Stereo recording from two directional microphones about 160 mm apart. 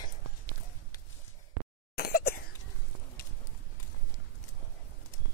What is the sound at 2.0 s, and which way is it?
Cough, 80° left.